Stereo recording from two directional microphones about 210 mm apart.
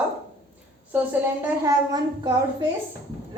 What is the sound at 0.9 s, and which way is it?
A woman's voice, 10° right (ahead or behind).